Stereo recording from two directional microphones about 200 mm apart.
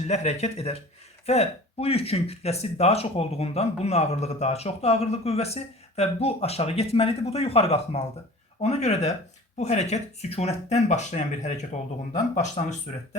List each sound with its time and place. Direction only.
0.1 s speech: 35° left (ahead or behind)